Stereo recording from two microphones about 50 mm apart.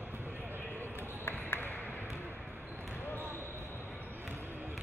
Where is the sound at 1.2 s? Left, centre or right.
Left.